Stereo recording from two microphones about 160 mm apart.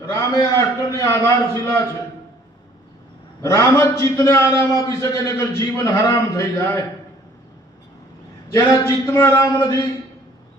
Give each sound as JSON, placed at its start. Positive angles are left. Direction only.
{"t": 0.1, "sound": "a man's voice", "side_deg": 15}
{"t": 3.4, "sound": "a man's voice", "side_deg": 20}
{"t": 9.0, "sound": "speech", "side_deg": 15}